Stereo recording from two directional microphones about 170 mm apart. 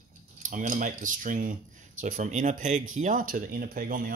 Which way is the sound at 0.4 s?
50° right (ahead or behind).